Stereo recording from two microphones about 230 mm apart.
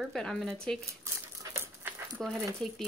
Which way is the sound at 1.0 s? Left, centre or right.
Centre.